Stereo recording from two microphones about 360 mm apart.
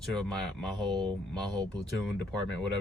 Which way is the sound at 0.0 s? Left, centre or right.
Centre.